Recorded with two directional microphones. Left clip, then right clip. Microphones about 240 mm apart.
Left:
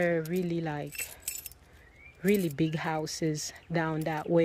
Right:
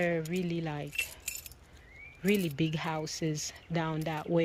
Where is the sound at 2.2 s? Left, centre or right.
Centre.